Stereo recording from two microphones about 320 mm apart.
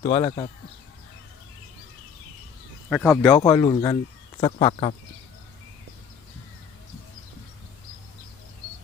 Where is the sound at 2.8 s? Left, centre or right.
Centre.